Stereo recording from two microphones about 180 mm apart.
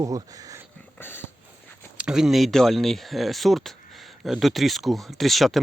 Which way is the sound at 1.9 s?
5° right (ahead or behind).